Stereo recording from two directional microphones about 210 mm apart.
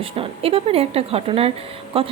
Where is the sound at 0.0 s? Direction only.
25° right (ahead or behind).